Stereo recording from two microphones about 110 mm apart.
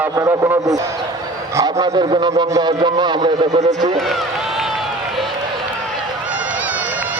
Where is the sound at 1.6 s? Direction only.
40° right (ahead or behind).